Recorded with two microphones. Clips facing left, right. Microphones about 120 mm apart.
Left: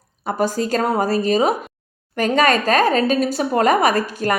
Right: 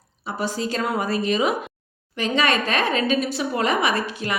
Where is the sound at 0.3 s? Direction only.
45° left (ahead or behind).